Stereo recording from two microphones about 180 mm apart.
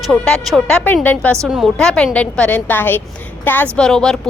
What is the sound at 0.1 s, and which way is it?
A woman's voice, centre (ahead or behind).